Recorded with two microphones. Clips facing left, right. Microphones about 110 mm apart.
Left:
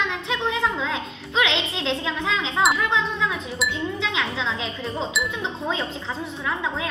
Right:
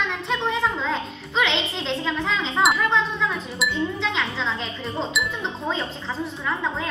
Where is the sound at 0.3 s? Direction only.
Centre (ahead or behind).